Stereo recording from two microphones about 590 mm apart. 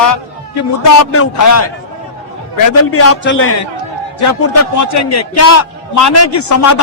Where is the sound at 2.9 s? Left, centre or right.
Left.